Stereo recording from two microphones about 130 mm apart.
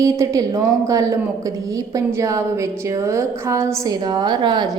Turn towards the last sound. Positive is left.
turn(degrees=-35)  # may be behind; listen again after turning